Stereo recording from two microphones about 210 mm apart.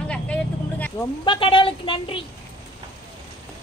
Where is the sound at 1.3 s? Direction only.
25° left (ahead or behind).